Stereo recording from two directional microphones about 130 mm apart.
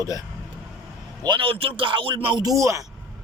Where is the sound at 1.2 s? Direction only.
40° right (ahead or behind); by 2.9 s 25° right (ahead or behind).